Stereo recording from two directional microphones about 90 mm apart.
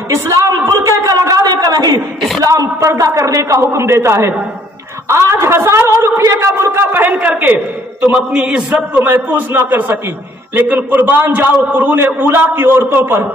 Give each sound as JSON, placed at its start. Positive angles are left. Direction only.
{"t": 0.1, "sound": "a sound", "side_deg": -40}
{"t": 2.9, "sound": "a man's voice", "side_deg": -35}
{"t": 8.9, "sound": "a man's voice", "side_deg": -20}